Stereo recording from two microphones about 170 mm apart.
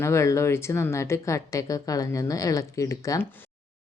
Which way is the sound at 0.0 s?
15° left (ahead or behind).